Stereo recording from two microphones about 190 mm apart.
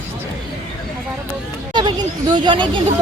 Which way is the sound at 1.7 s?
25° right (ahead or behind).